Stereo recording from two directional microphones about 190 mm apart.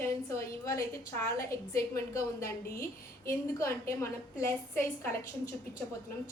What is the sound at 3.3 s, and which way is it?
A woman's voice, 15° left (ahead or behind).